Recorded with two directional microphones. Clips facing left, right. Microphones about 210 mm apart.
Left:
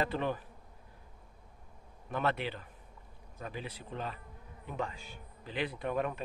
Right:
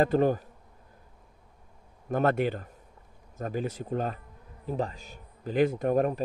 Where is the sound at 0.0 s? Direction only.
45° right (ahead or behind).